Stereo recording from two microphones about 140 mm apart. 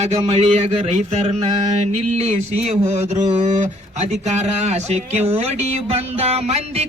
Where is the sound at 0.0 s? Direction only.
50° right (ahead or behind).